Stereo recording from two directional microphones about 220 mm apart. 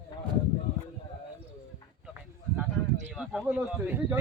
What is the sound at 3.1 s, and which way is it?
Speech, centre (ahead or behind).